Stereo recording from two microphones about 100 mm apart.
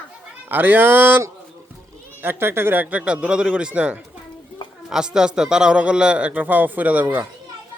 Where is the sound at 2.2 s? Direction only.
20° right (ahead or behind).